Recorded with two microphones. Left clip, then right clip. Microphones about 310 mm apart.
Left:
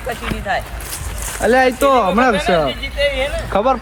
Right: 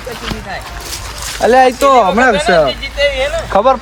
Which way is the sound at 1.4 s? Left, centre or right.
Right.